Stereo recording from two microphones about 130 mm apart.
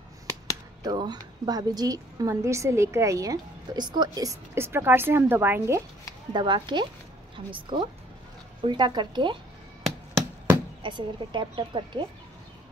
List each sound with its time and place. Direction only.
0.8 s a woman's voice: 35° right (ahead or behind)
6.3 s a woman's voice: 40° right (ahead or behind)
10.8 s a woman's voice: 35° right (ahead or behind)